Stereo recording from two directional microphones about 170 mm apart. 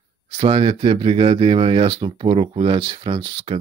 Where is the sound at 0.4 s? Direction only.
35° right (ahead or behind).